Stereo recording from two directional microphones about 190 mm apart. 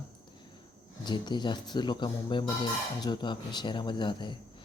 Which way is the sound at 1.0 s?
25° left (ahead or behind).